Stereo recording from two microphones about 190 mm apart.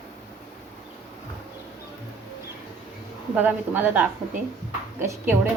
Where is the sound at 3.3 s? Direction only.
10° right (ahead or behind).